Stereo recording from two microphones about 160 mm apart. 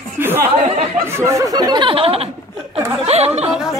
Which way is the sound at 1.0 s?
15° right (ahead or behind).